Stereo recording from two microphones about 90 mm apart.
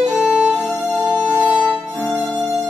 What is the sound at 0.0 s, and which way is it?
Violin, centre (ahead or behind).